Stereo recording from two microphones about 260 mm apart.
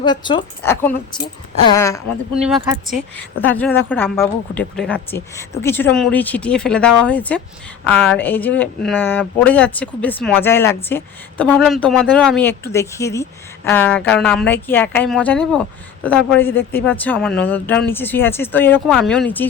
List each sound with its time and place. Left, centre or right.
0.0 s speech: centre
2.3 s speech: centre